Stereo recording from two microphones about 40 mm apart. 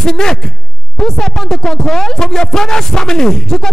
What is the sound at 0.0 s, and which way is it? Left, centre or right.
Speech, centre.